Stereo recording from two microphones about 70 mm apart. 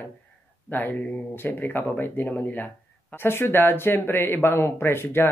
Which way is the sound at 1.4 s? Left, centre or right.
Left.